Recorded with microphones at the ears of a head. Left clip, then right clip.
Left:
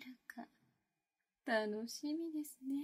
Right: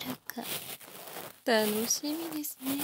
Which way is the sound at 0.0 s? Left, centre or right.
Right.